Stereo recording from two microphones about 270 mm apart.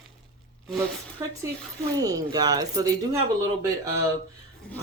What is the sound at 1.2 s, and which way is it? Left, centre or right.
Speech, centre.